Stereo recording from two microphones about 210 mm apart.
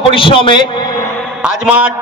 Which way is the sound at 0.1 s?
25° left (ahead or behind).